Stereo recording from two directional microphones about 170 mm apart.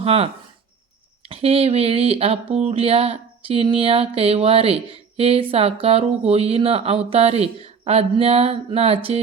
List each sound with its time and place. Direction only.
0.0 s speech: 35° right (ahead or behind)
1.3 s speech: 35° right (ahead or behind)